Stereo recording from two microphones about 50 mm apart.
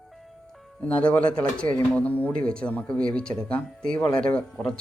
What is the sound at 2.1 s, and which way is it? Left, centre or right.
Speech, left.